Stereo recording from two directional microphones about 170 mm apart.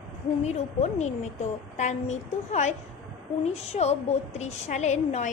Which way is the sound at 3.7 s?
40° left (ahead or behind).